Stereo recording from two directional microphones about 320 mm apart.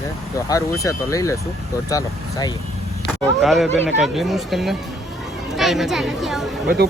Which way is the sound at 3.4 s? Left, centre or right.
Centre.